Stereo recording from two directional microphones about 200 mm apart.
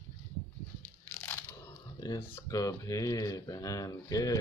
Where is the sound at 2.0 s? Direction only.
15° left (ahead or behind).